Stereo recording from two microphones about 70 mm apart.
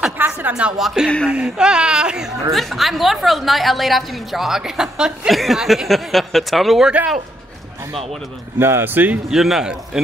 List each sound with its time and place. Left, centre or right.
0.2 s speech: right
0.7 s a woman's voice: centre
2.5 s a woman's voice: centre
8.5 s speech: right
9.3 s speech: centre